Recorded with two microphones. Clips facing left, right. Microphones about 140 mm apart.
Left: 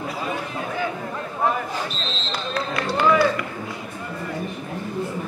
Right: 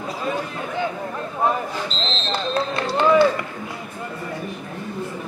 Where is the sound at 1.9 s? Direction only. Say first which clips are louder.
Right 3 dB; 15° left (ahead or behind).